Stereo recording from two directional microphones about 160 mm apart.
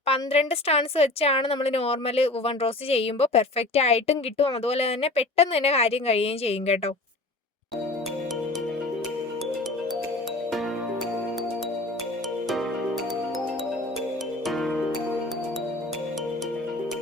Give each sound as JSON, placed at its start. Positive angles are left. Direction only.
{"t": 0.0, "sound": "speech", "side_deg": 40}
{"t": 14.4, "sound": "music", "side_deg": 0}